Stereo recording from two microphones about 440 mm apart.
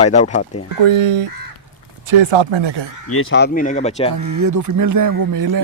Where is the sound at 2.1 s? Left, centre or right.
Right.